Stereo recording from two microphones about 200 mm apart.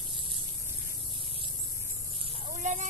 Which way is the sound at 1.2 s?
25° right (ahead or behind).